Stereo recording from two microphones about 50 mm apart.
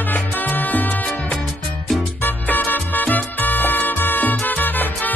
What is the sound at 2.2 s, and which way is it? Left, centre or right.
Music, left.